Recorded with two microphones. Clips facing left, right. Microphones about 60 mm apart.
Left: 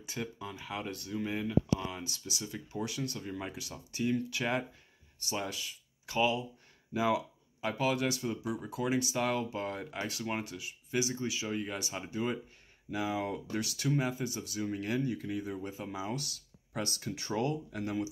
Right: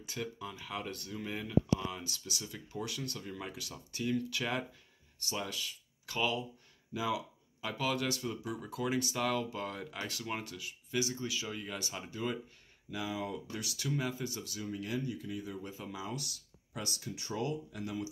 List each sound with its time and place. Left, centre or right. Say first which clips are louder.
0.0 s speech: left 1 dB; centre
6.9 s speech: left 5 dB; left
12.9 s speech: left 4 dB; left
14.7 s speech: left 3 dB; left
15.4 s speech: left 4 dB; left
16.7 s speech: left 4 dB; left